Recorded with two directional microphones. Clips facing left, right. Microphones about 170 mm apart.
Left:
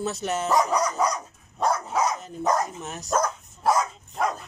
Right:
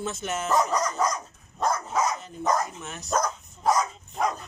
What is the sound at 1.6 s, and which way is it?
Dog, 10° left (ahead or behind).